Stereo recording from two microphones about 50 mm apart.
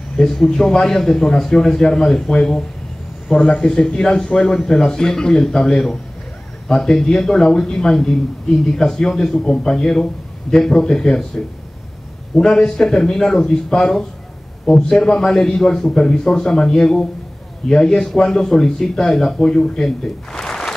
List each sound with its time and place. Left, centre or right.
0.2 s a man's voice: centre
3.6 s a man's voice: centre
4.5 s a man's voice: centre
20.3 s a sound: centre